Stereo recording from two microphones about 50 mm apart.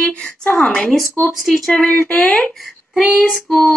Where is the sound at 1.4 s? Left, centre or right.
Centre.